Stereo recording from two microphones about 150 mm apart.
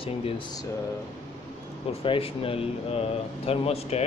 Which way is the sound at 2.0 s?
40° left (ahead or behind).